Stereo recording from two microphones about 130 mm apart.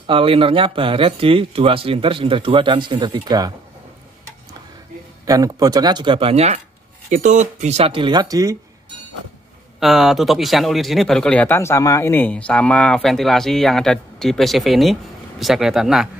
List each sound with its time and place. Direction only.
0.0 s speech: 45° right (ahead or behind)
5.2 s speech: 25° right (ahead or behind); by 6.6 s 55° right (ahead or behind)
7.1 s speech: 70° right (ahead or behind); by 8.5 s 25° right (ahead or behind)
9.8 s speech: centre (ahead or behind)